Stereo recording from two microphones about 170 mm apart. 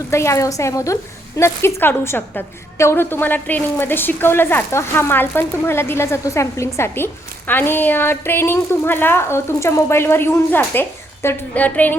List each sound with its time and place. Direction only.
0.1 s a woman's voice: 15° left (ahead or behind)